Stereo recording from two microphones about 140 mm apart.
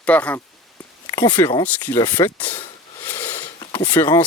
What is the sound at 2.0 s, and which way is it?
Speech, 30° left (ahead or behind).